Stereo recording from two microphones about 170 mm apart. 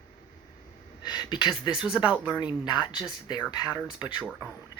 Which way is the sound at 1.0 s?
25° left (ahead or behind).